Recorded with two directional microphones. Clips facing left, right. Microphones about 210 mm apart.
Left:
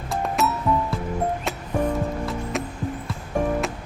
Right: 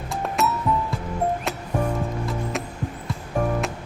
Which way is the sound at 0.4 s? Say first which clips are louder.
Right 1 dB; centre (ahead or behind).